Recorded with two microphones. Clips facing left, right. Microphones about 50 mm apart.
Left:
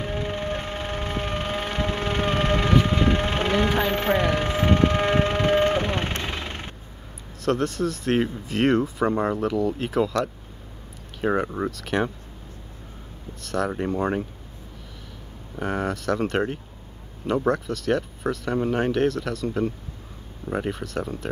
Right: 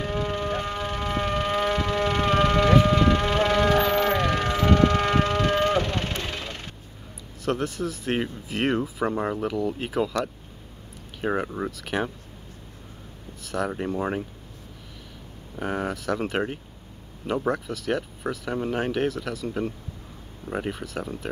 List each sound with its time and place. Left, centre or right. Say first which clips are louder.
0.0 s siren: right 1 dB; centre
0.7 s siren: right 1 dB; left
2.9 s a sound: right 2 dB; left
6.2 s vehicle: left 2 dB; left
7.4 s speech: left 3 dB; centre
13.4 s speech: left 2 dB; centre
15.6 s speech: left 2 dB; centre